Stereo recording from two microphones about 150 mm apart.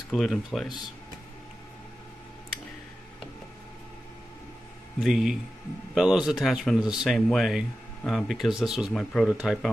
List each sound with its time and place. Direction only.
0.1 s speech: centre (ahead or behind)
4.9 s speech: centre (ahead or behind)